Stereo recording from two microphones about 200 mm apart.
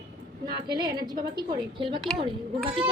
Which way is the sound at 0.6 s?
20° right (ahead or behind).